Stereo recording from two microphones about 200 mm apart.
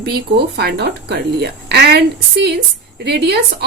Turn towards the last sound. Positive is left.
turn(degrees=-55)  # may be behind; listen again after turning